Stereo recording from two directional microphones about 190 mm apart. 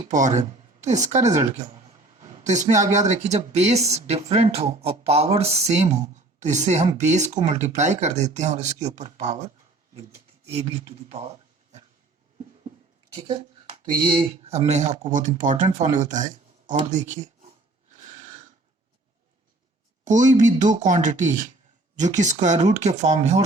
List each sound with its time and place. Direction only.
0.1 s speech: 40° right (ahead or behind)
2.4 s speech: 40° right (ahead or behind)
10.5 s speech: 30° right (ahead or behind)
14.0 s speech: 25° right (ahead or behind)
18.0 s a sound: 40° right (ahead or behind)
20.1 s speech: 40° right (ahead or behind)